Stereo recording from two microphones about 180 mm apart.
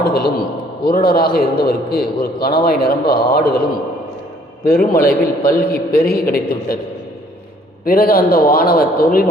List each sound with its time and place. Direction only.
0.0 s a sound: 60° left (ahead or behind)
0.9 s a man's voice: 55° left (ahead or behind)
7.9 s a man's voice: 55° left (ahead or behind)